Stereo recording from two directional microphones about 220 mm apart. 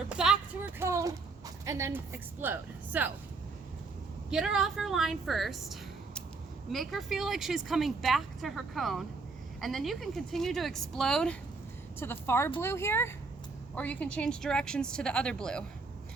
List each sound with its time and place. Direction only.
0.1 s a sound: 5° right (ahead or behind)
1.6 s a woman's voice: 15° right (ahead or behind)
4.3 s speech: 5° right (ahead or behind)